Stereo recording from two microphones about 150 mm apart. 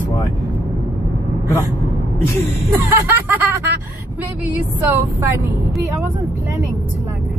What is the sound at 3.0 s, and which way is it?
Speech, 15° right (ahead or behind).